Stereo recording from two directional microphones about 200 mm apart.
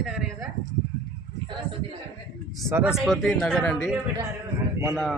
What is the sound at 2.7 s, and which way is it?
Speech, 5° right (ahead or behind).